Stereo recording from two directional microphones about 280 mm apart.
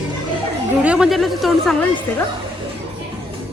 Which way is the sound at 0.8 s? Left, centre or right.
Centre.